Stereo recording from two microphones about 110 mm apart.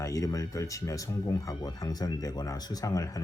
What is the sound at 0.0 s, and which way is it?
Speech, 30° left (ahead or behind).